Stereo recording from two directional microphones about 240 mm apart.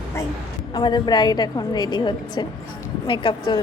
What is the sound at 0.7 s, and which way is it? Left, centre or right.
A woman's voice, centre.